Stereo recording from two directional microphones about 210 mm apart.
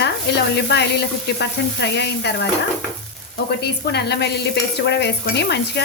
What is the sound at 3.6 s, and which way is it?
Speech, 50° left (ahead or behind).